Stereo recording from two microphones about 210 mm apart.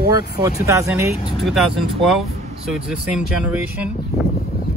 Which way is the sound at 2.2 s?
30° right (ahead or behind).